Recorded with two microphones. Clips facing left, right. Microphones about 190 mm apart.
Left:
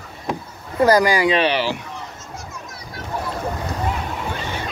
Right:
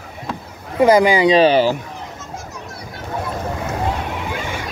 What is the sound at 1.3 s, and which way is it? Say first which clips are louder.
Speech: right 7 dB; 40° right (ahead or behind).